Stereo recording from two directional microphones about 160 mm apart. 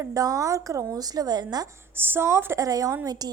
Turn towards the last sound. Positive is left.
turn(degrees=-25)  # may be behind; listen again after turning